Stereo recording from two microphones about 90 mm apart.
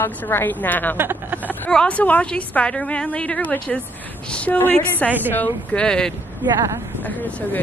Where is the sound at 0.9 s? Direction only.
20° right (ahead or behind).